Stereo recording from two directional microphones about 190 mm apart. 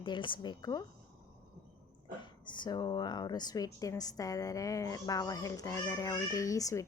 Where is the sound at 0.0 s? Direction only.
25° left (ahead or behind).